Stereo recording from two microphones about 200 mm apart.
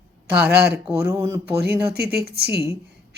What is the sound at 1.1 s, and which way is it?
Speech, 15° right (ahead or behind).